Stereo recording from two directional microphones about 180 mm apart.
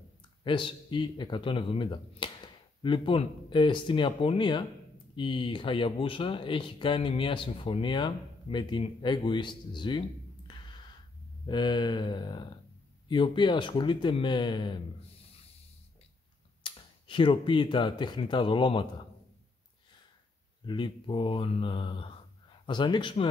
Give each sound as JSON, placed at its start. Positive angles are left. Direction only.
{"t": 0.4, "sound": "speech", "side_deg": 25}
{"t": 16.6, "sound": "speech", "side_deg": 25}
{"t": 20.6, "sound": "speech", "side_deg": 25}